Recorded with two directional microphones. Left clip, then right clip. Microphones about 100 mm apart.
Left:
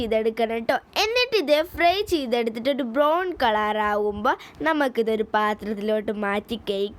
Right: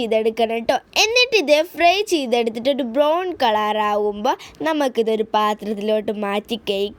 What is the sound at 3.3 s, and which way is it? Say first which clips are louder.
A woman's voice: right 4 dB; 15° right (ahead or behind).